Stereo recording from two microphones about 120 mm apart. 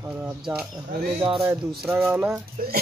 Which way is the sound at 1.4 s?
20° right (ahead or behind).